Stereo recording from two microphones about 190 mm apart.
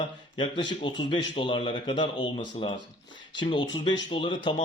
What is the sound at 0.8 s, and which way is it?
Speech, 25° left (ahead or behind).